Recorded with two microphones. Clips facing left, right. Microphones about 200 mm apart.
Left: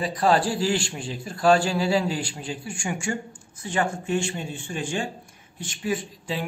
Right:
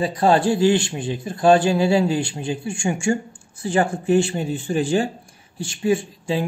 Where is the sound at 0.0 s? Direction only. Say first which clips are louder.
Right 4 dB; 25° right (ahead or behind).